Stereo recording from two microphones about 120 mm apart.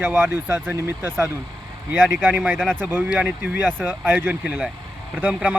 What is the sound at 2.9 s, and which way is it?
Speech, 10° right (ahead or behind).